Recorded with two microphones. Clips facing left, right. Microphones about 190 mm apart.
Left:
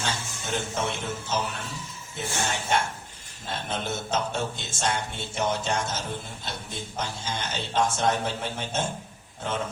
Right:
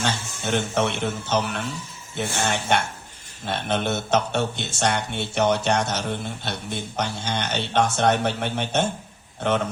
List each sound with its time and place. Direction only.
0.0 s speech: 70° right (ahead or behind)
3.4 s speech: 70° right (ahead or behind)